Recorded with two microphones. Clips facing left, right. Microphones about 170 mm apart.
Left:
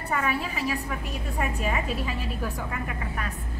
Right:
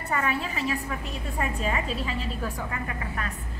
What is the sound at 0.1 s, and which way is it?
A woman's voice, 5° left (ahead or behind).